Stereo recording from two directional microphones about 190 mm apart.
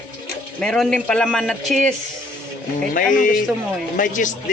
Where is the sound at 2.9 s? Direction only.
45° left (ahead or behind).